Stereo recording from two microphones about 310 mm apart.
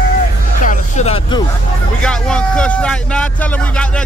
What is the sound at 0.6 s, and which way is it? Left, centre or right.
Speech, left.